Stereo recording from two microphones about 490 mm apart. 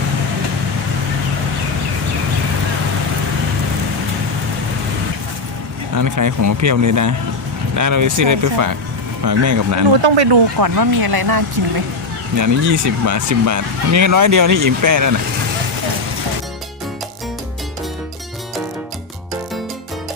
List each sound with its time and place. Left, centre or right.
6.0 s speech: right
10.0 s speech: right
10.6 s speech: right
12.4 s speech: right